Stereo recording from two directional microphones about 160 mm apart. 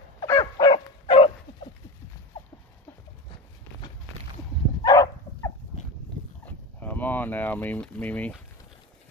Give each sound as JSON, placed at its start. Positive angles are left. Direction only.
{"t": 0.2, "sound": "dog", "side_deg": 25}
{"t": 4.8, "sound": "dog", "side_deg": 20}
{"t": 6.4, "sound": "a sound", "side_deg": 10}